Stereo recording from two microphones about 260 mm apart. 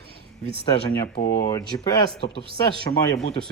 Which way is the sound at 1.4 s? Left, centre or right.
Centre.